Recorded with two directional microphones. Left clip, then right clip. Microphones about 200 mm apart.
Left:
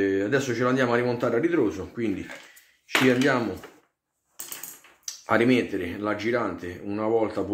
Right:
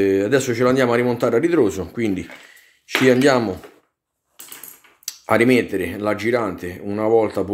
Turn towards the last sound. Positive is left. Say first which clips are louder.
# right 7 dB
turn(degrees=-50)  # may be behind; listen again after turning